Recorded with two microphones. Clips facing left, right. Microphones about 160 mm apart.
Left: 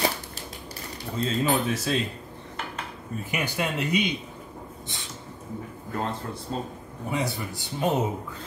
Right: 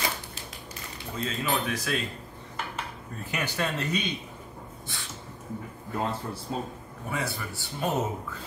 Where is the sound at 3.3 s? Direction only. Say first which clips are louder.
Left 1 dB; 10° left (ahead or behind).